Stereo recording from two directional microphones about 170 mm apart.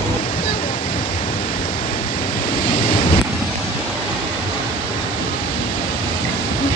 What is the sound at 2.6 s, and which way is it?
Waves, 55° left (ahead or behind).